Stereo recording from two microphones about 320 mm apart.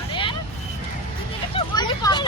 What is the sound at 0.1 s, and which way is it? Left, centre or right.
Vehicle, centre.